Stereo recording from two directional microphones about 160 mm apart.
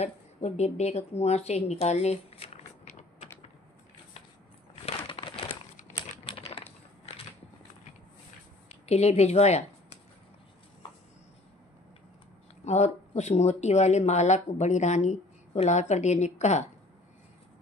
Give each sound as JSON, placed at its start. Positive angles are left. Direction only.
{"t": 0.0, "sound": "a woman's voice", "side_deg": 45}
{"t": 4.8, "sound": "a sound", "side_deg": 35}
{"t": 8.6, "sound": "a woman's voice", "side_deg": 40}
{"t": 12.6, "sound": "speech", "side_deg": 45}